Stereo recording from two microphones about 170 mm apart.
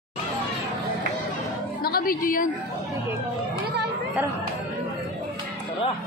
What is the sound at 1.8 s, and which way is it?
Speech, 60° left (ahead or behind).